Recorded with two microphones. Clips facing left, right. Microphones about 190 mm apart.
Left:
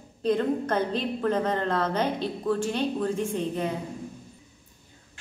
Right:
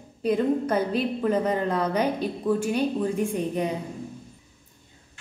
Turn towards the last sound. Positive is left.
turn(degrees=-15)  # may be behind; listen again after turning